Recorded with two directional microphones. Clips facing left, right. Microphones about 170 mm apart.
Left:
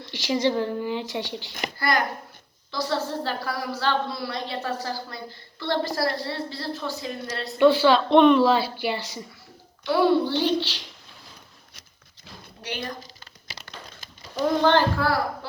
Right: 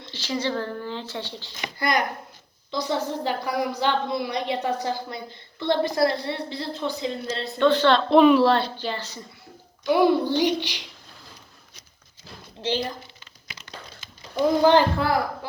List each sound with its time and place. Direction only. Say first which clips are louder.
0.0 s a woman's voice: left 4 dB; 15° left (ahead or behind)
1.8 s a woman's voice: right 1 dB; 20° right (ahead or behind)
7.4 s a woman's voice: left 2 dB; 10° left (ahead or behind)
9.8 s a child's voice: right 1 dB; 15° right (ahead or behind)
12.6 s a woman's voice: right 8 dB; 25° right (ahead or behind)
14.6 s a child's voice: right 2 dB; 15° right (ahead or behind)